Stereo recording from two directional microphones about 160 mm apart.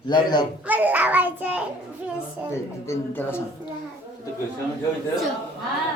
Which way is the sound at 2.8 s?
15° left (ahead or behind).